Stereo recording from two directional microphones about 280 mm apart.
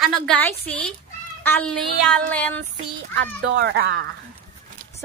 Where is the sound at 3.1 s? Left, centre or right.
Right.